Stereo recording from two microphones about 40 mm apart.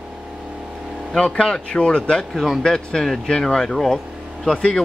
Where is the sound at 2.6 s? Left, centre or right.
Centre.